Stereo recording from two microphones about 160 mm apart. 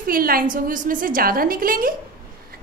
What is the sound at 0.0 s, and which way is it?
A woman's voice, 65° right (ahead or behind).